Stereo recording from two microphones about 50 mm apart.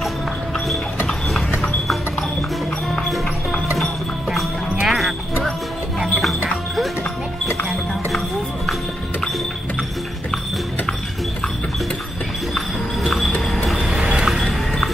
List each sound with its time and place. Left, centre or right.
3.7 s music: centre
4.8 s basketball bounce: centre
6.0 s music: centre
12.5 s a sound: centre
13.5 s train: centre
13.7 s vehicle: centre